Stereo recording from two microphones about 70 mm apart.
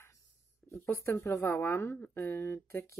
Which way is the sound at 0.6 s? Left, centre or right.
Left.